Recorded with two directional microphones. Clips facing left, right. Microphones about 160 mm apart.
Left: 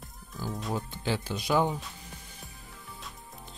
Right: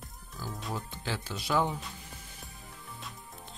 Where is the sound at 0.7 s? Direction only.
20° left (ahead or behind).